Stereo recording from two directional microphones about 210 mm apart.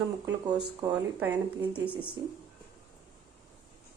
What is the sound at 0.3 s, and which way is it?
A woman's voice, 20° right (ahead or behind).